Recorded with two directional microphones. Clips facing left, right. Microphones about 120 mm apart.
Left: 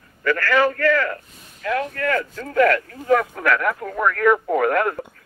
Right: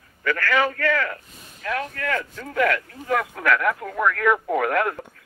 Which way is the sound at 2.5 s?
50° left (ahead or behind).